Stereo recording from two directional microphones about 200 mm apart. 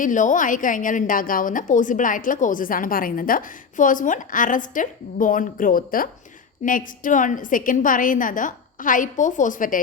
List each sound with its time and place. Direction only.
0.0 s a woman's voice: 40° left (ahead or behind)